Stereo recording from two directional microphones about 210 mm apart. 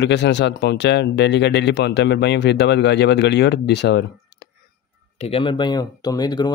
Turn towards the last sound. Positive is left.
turn(degrees=20)  # may be behind; listen again after turning